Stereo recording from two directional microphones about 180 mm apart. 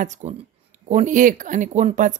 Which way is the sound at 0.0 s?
40° right (ahead or behind).